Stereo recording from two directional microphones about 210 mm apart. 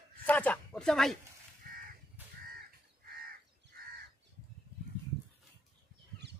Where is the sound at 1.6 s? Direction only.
45° right (ahead or behind).